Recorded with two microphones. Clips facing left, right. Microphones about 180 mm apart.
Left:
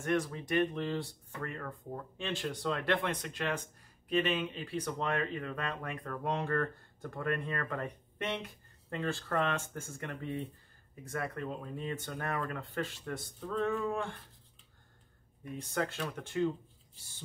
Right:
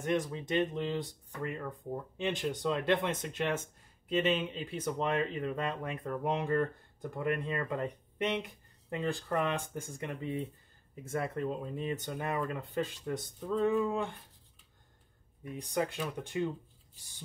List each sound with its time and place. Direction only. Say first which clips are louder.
0.0 s speech: even; 20° right (ahead or behind)
15.5 s speech: right 2 dB; 15° right (ahead or behind)